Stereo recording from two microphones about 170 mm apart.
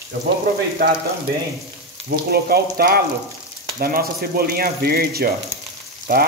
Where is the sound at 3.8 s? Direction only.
60° right (ahead or behind).